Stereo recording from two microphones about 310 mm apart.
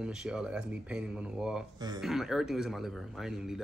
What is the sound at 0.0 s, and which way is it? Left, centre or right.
A man's voice, centre.